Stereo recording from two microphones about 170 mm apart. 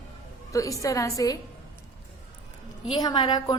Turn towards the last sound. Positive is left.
turn(degrees=25)  # may be behind; listen again after turning